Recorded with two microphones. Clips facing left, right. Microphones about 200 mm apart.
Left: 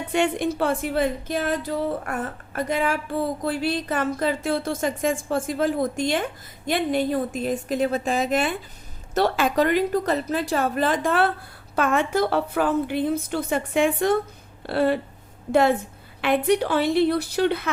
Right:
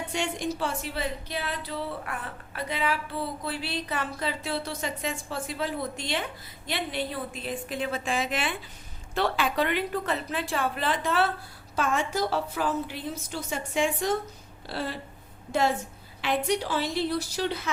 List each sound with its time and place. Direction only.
0.1 s a woman's voice: 60° left (ahead or behind)
16.2 s a woman's voice: 60° left (ahead or behind)